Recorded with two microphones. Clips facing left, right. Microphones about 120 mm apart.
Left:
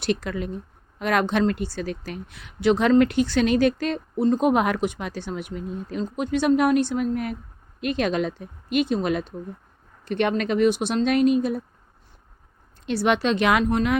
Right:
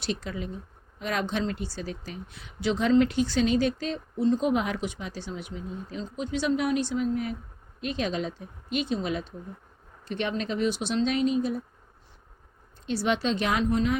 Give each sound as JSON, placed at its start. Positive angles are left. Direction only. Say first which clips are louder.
{"t": 0.0, "sound": "speech", "louder": "left 6 dB", "side_deg": 65}
{"t": 12.8, "sound": "speech", "louder": "left 5 dB", "side_deg": 65}